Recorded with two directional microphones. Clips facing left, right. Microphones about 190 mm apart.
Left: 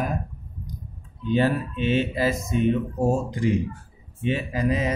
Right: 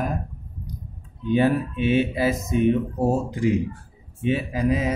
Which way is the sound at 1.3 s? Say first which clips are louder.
Right 2 dB; 10° right (ahead or behind).